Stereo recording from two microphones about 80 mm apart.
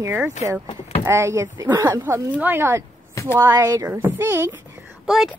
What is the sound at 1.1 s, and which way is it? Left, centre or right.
Speech, right.